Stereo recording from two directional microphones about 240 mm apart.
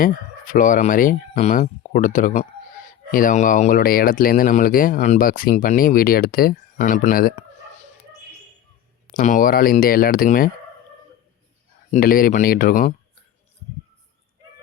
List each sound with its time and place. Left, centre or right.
0.0 s speech: left
9.1 s speech: left
11.9 s speech: left